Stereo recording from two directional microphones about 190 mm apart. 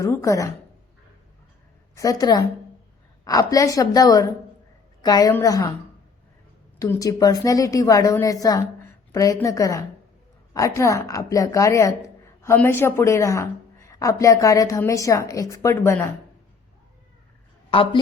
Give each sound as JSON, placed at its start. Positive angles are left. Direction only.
{"t": 0.0, "sound": "a woman's voice", "side_deg": 15}
{"t": 2.0, "sound": "a woman's voice", "side_deg": 20}
{"t": 6.7, "sound": "a woman's voice", "side_deg": 15}
{"t": 17.7, "sound": "a woman's voice", "side_deg": 30}